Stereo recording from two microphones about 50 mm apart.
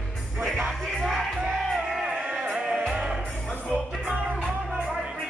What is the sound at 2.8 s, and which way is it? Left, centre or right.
Music, centre.